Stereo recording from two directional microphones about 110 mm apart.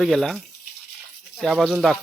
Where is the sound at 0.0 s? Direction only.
Centre (ahead or behind).